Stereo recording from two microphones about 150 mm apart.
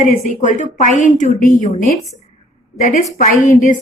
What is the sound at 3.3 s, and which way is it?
Speech, 60° left (ahead or behind).